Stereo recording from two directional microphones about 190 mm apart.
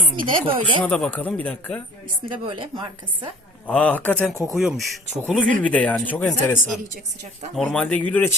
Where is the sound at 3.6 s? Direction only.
5° left (ahead or behind).